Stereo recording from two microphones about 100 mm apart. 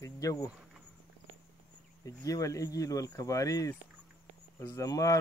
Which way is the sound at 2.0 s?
35° left (ahead or behind).